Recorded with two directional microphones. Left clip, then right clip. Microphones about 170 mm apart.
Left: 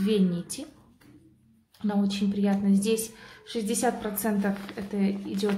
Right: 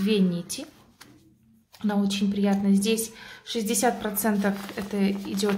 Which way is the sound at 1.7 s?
10° right (ahead or behind).